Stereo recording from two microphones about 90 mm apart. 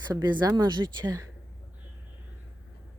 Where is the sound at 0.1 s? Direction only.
50° right (ahead or behind).